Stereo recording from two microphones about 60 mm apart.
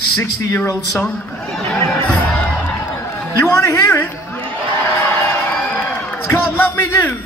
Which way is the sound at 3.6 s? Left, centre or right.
Left.